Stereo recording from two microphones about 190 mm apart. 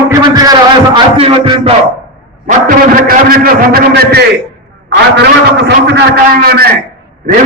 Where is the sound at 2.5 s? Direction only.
45° right (ahead or behind).